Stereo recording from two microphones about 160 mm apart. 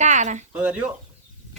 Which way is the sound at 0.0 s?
50° right (ahead or behind).